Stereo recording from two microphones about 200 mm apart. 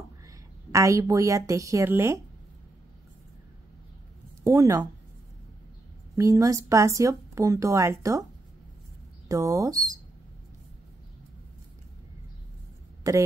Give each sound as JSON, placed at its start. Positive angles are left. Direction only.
{"t": 0.7, "sound": "speech", "side_deg": -15}
{"t": 4.4, "sound": "speech", "side_deg": -15}
{"t": 6.1, "sound": "speech", "side_deg": -15}
{"t": 9.3, "sound": "speech", "side_deg": -15}
{"t": 13.0, "sound": "speech", "side_deg": -15}